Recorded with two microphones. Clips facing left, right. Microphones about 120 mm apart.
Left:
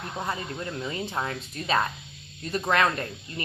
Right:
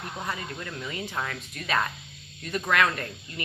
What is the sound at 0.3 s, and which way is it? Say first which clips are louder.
A woman's voice: left 3 dB; 30° left (ahead or behind).